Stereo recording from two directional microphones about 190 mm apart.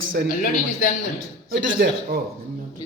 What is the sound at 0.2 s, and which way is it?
Speech, 55° right (ahead or behind).